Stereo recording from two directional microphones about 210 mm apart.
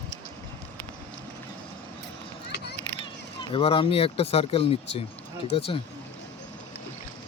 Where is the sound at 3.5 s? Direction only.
25° left (ahead or behind).